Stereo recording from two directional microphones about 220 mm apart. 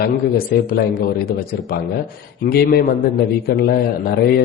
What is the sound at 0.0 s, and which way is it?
A man's voice, 40° left (ahead or behind).